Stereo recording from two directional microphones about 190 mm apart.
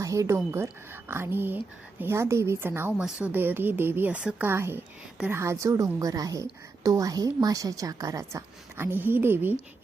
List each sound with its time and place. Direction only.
0.0 s speech: 15° right (ahead or behind)